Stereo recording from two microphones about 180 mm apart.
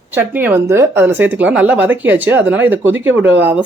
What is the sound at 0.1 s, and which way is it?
A woman's voice, 10° right (ahead or behind).